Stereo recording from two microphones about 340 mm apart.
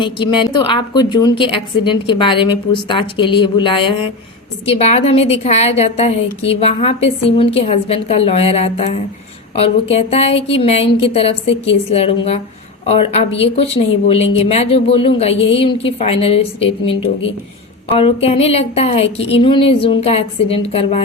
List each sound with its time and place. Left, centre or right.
0.0 s a woman's voice: centre
15.4 s a woman's voice: left
15.6 s a woman's voice: centre
17.9 s a woman's voice: centre